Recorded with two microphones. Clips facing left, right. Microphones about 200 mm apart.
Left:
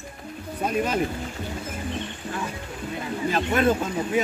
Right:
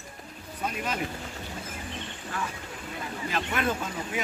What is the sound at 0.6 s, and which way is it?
Speech, 40° left (ahead or behind).